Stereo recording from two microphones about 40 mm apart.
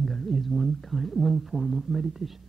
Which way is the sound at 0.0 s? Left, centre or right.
Centre.